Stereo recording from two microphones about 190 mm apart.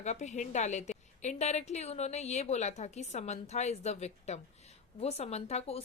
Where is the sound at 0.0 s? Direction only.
35° left (ahead or behind).